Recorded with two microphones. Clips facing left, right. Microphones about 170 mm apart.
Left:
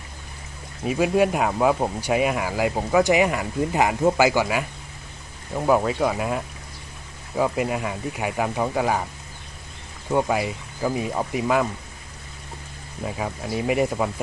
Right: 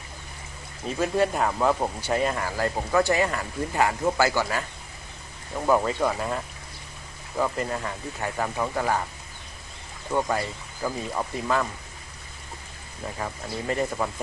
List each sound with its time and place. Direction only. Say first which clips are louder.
0.9 s speech: left 4 dB; 10° left (ahead or behind)
10.1 s speech: left 4 dB; 15° left (ahead or behind)
13.1 s speech: left 4 dB; 10° left (ahead or behind)